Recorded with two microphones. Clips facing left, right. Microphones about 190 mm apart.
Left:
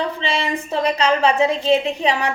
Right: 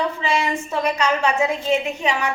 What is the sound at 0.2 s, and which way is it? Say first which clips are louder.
A woman's voice: right 1 dB; 30° left (ahead or behind).